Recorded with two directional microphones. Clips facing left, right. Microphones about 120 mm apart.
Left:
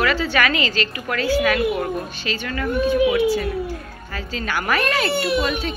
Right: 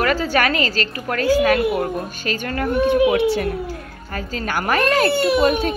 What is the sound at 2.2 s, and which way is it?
Speech, 45° right (ahead or behind).